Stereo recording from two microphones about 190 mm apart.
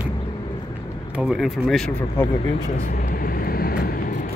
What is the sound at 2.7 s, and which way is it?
Vehicle, 50° left (ahead or behind).